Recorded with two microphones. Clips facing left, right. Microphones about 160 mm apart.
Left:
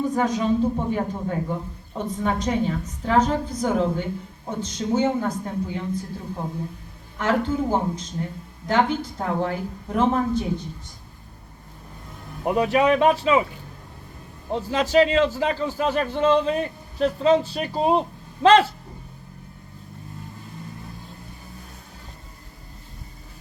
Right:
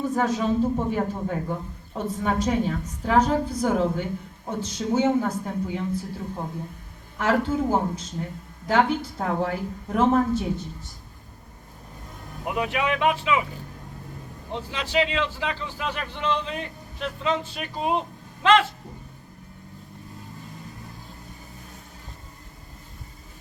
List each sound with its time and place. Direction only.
0.1 s a woman's voice: 5° right (ahead or behind)
7.2 s a woman's voice: 10° right (ahead or behind)
12.5 s a man's voice: 35° left (ahead or behind)
14.5 s a man's voice: 40° left (ahead or behind)